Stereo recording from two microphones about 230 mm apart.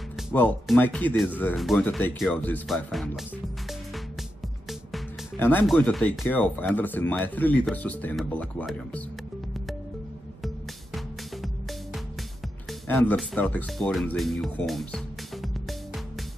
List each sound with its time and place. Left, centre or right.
0.3 s speech: centre
4.6 s speech: centre
12.8 s speech: centre